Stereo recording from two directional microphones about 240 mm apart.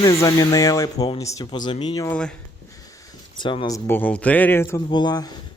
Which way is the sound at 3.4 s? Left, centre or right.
Centre.